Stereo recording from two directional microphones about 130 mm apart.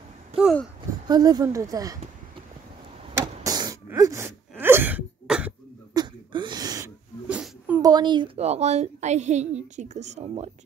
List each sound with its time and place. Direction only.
1.0 s speech: 30° right (ahead or behind)
3.4 s throat clearing: 30° right (ahead or behind); by 5.5 s 5° right (ahead or behind)
5.9 s a sound: 35° right (ahead or behind)
7.2 s a sound: 10° right (ahead or behind)
7.8 s speech: 35° right (ahead or behind)
8.4 s a woman's voice: 55° right (ahead or behind)